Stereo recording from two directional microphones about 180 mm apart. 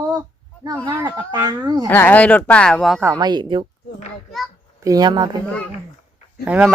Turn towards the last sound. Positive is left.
turn(degrees=-10)  # may be behind; listen again after turning